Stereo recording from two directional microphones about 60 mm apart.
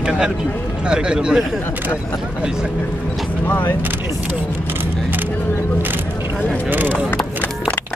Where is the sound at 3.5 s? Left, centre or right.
Left.